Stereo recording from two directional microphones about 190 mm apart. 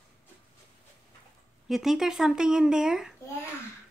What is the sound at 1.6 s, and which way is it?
Speech, centre (ahead or behind).